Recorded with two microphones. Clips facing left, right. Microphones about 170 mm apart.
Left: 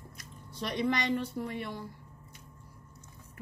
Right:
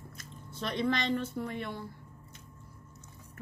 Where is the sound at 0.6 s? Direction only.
15° left (ahead or behind).